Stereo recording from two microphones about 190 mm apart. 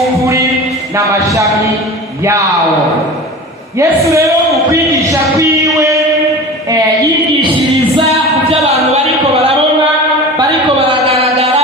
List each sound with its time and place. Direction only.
0.2 s music: 15° right (ahead or behind)
3.8 s music: 15° right (ahead or behind)
5.4 s music: 15° right (ahead or behind)
8.4 s a sound: 35° right (ahead or behind)
10.3 s music: 30° right (ahead or behind)